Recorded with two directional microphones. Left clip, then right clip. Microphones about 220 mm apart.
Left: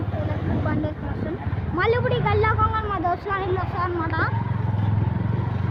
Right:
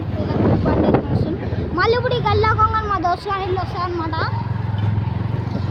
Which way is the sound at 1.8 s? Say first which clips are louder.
Right 4 dB; 20° right (ahead or behind).